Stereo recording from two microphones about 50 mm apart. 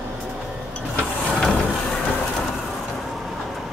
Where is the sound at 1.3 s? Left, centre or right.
Centre.